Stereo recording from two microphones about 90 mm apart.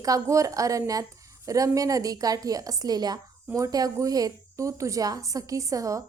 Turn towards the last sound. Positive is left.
turn(degrees=-35)  # may be behind; listen again after turning